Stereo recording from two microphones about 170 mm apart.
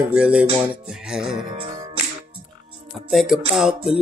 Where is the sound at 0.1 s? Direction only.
5° right (ahead or behind).